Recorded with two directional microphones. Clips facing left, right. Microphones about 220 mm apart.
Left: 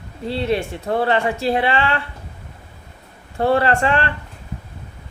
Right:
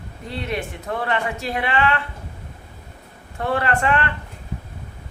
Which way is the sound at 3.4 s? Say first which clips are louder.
Left 5 dB; 30° left (ahead or behind).